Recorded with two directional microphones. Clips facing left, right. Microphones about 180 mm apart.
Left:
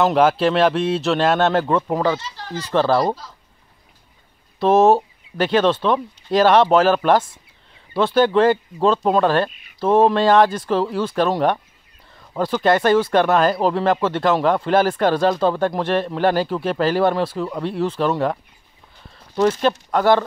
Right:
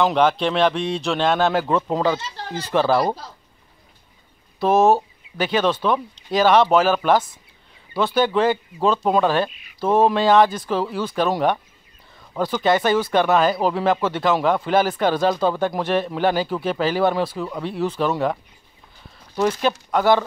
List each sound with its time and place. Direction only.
0.0 s speech: 5° left (ahead or behind)
2.0 s speech: 20° right (ahead or behind)
2.7 s speech: 10° right (ahead or behind)
4.6 s speech: 5° right (ahead or behind)
19.6 s speech: 5° right (ahead or behind)